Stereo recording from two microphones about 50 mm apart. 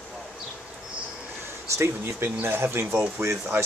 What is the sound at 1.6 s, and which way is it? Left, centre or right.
Speech, right.